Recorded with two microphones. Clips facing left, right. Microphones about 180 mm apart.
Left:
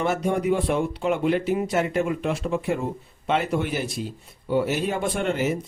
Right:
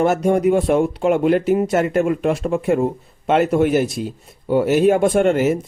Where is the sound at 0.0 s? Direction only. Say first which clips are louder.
Right 8 dB; 45° right (ahead or behind).